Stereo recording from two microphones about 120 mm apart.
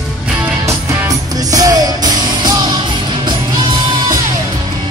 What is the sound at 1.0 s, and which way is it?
Music, 30° right (ahead or behind).